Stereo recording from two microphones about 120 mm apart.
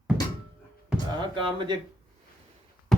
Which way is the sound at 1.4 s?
45° right (ahead or behind).